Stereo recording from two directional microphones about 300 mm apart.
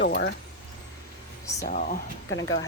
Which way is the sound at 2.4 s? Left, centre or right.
Left.